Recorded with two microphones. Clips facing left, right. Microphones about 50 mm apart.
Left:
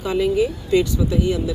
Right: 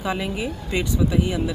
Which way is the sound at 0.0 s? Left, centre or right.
Centre.